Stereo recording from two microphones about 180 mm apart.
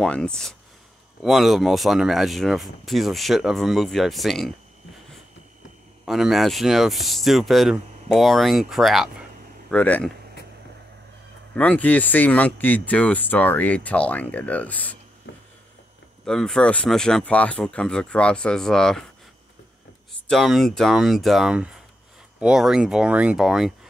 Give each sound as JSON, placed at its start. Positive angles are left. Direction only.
{"t": 0.0, "sound": "speech", "side_deg": 5}
{"t": 6.0, "sound": "speech", "side_deg": 0}
{"t": 11.5, "sound": "speech", "side_deg": 10}
{"t": 15.3, "sound": "a sound", "side_deg": 80}
{"t": 16.3, "sound": "speech", "side_deg": 5}
{"t": 20.2, "sound": "speech", "side_deg": 0}